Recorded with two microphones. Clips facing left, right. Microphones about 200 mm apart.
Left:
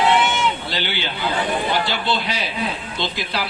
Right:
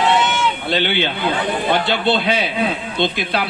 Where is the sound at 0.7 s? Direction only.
55° right (ahead or behind).